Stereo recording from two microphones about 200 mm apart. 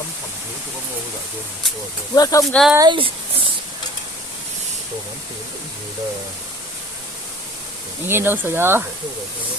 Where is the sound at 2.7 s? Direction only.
20° right (ahead or behind).